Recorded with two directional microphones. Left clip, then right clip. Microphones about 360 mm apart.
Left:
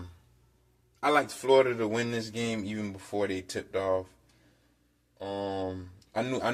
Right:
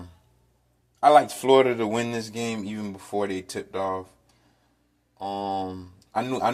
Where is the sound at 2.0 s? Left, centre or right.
Centre.